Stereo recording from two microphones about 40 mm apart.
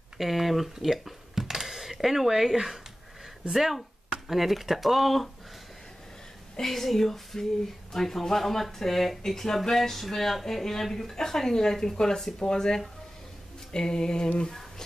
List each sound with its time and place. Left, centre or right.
0.2 s speech: centre
3.5 s speech: centre
6.6 s speech: centre
13.7 s a sound: centre